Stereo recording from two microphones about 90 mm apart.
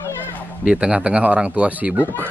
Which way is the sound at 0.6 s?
10° right (ahead or behind).